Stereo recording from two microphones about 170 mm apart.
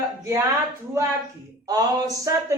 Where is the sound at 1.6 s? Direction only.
20° right (ahead or behind).